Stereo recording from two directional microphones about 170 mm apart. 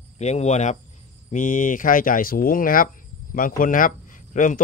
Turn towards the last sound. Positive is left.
turn(degrees=50)  # may be behind; listen again after turning